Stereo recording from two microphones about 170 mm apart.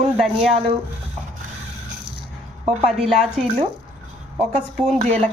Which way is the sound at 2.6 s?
40° right (ahead or behind).